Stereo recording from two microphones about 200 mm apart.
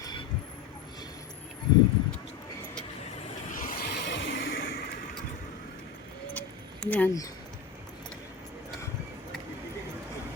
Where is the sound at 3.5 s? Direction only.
45° left (ahead or behind).